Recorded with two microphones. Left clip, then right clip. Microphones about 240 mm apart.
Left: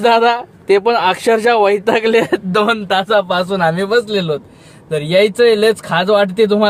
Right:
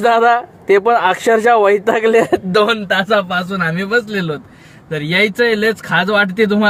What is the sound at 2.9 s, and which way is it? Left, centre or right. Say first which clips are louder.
Speech: left 1 dB; centre.